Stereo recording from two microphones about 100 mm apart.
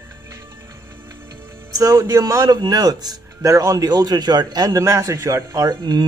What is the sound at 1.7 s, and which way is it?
A man's voice, 35° right (ahead or behind).